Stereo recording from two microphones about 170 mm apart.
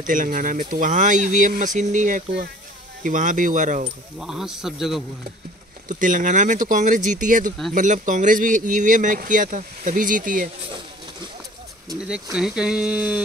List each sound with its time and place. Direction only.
0.0 s speech: 50° right (ahead or behind)
4.2 s speech: 5° right (ahead or behind)
5.9 s speech: 50° right (ahead or behind)
12.1 s speech: 5° right (ahead or behind)